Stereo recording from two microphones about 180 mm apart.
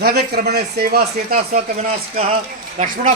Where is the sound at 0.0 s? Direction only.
60° right (ahead or behind).